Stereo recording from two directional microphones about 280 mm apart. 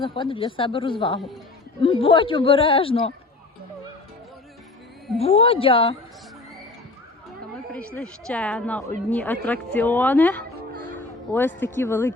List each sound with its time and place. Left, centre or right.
0.0 s a woman's voice: centre
5.2 s a woman's voice: centre
7.7 s a woman's voice: centre
10.8 s music: centre
11.3 s speech: centre